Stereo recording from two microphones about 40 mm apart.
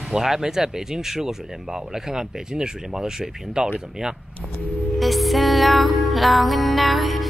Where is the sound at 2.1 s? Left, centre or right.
Centre.